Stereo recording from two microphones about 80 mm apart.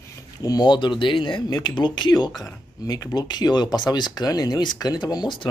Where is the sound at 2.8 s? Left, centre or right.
Left.